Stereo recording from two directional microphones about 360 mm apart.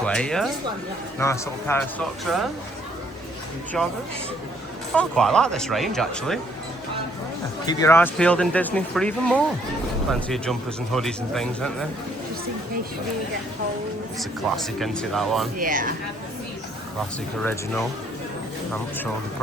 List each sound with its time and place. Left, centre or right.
0.0 s speech: centre
3.8 s speech: centre
4.9 s speech: centre
7.6 s speech: centre
14.2 s speech: centre
15.5 s speech: right